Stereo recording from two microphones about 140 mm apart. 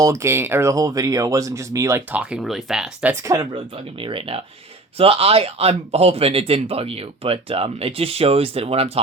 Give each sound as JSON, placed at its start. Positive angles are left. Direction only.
{"t": 0.0, "sound": "speech", "side_deg": -20}
{"t": 2.3, "sound": "speech", "side_deg": 0}
{"t": 3.2, "sound": "speech", "side_deg": -25}
{"t": 4.0, "sound": "speech", "side_deg": -40}